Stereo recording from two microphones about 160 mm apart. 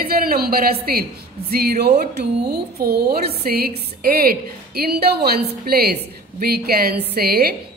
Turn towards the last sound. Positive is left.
turn(degrees=-80)